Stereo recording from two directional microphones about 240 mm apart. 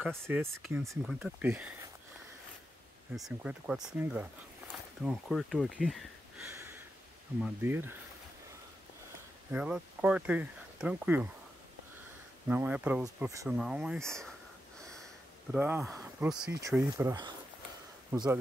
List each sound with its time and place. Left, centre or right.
0.0 s speech: centre
3.2 s speech: centre
9.5 s speech: centre
12.4 s speech: centre
15.5 s speech: centre
16.5 s speech: centre